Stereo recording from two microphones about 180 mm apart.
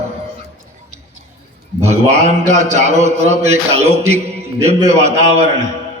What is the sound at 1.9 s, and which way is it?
A man's voice, 40° right (ahead or behind).